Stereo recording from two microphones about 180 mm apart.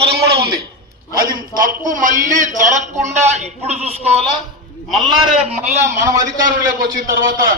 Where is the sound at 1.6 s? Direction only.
45° right (ahead or behind).